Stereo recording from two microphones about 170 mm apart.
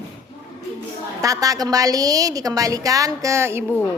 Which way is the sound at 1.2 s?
20° right (ahead or behind).